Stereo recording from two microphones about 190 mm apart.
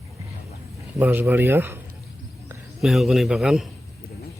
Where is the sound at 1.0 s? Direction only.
10° right (ahead or behind).